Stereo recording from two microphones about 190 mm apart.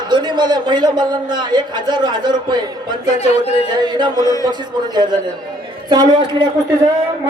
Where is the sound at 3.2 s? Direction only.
35° left (ahead or behind).